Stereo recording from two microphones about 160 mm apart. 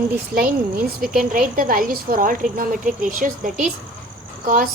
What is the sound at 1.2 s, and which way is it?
A woman's voice, 55° right (ahead or behind).